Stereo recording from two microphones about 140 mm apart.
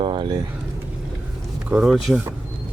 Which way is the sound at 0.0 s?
35° right (ahead or behind).